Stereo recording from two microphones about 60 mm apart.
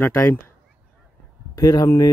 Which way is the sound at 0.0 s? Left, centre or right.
Left.